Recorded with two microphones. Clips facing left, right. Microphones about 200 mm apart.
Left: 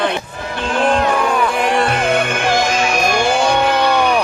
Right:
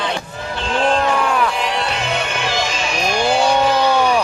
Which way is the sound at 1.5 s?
50° left (ahead or behind).